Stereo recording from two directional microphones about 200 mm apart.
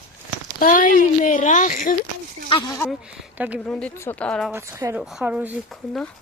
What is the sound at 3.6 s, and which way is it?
Speech, 10° left (ahead or behind).